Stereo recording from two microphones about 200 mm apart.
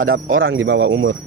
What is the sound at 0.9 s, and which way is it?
Speech, 65° right (ahead or behind).